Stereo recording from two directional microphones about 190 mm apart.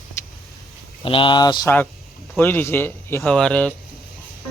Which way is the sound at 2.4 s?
10° left (ahead or behind).